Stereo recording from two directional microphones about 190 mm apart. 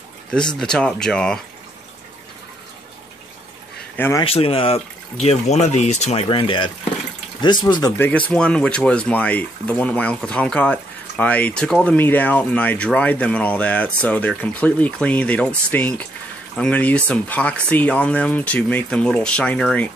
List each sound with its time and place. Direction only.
0.6 s speech: 5° left (ahead or behind)
3.9 s speech: 10° left (ahead or behind)
4.2 s speech: 30° left (ahead or behind)
6.2 s speech: 25° left (ahead or behind)
8.1 s speech: 5° left (ahead or behind)